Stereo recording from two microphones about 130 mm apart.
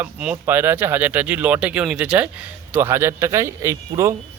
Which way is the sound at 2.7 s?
20° right (ahead or behind).